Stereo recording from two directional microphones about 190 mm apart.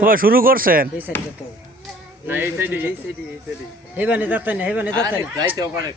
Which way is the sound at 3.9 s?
10° right (ahead or behind).